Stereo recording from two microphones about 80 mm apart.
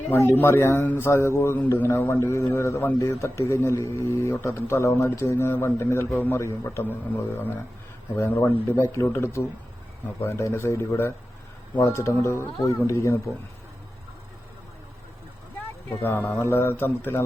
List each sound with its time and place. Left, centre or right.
0.1 s a man's voice: left
6.4 s speech: left
8.7 s a man's voice: left
15.9 s speech: left